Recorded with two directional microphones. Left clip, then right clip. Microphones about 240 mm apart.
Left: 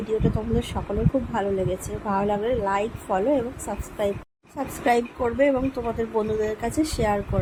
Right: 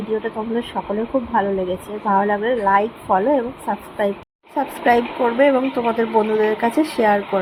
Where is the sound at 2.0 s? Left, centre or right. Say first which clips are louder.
Right 7 dB; centre.